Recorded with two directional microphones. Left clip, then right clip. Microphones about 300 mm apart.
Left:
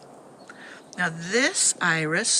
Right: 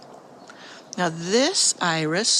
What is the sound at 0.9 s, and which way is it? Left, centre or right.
Speech, centre.